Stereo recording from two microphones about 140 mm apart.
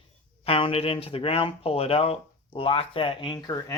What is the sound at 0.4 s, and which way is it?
Speech, 45° left (ahead or behind).